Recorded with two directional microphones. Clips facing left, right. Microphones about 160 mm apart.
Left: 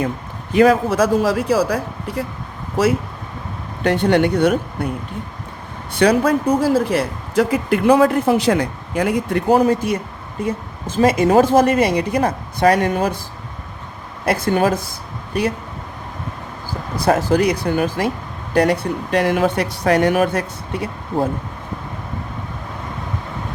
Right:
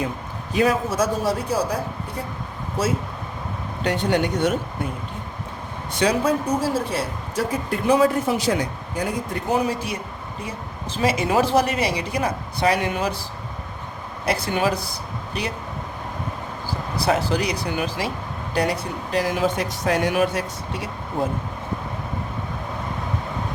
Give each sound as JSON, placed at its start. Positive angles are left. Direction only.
{"t": 0.5, "sound": "a man's voice", "side_deg": 60}
{"t": 3.8, "sound": "speech", "side_deg": 60}
{"t": 6.0, "sound": "speech", "side_deg": 60}
{"t": 6.9, "sound": "speech", "side_deg": 80}
{"t": 9.6, "sound": "a woman's voice", "side_deg": 50}
{"t": 14.3, "sound": "a woman's voice", "side_deg": 50}
{"t": 17.1, "sound": "a woman's voice", "side_deg": 50}